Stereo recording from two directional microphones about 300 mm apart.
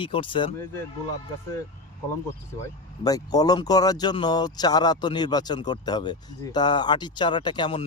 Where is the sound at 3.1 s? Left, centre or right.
Centre.